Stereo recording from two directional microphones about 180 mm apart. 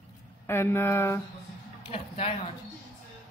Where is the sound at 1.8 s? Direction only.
35° left (ahead or behind).